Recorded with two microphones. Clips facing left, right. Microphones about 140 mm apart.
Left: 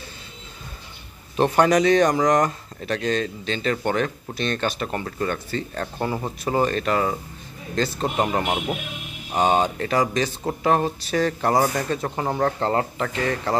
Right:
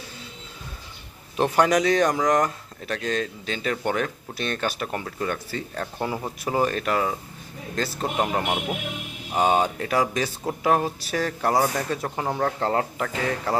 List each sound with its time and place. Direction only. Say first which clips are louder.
1.3 s speech: left 2 dB; centre (ahead or behind)